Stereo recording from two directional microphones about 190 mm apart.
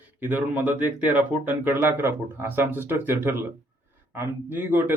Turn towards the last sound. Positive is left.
turn(degrees=-10)  # may be behind; listen again after turning